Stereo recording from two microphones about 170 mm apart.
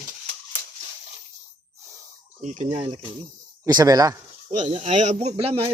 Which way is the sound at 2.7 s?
30° right (ahead or behind).